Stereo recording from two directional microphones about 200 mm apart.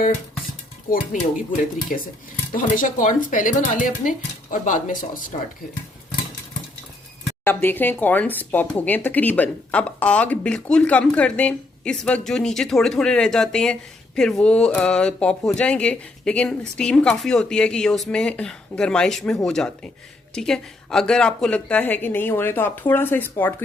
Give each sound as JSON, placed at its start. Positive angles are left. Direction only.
{"t": 2.6, "sound": "speech", "side_deg": 40}
{"t": 7.4, "sound": "a woman's voice", "side_deg": 10}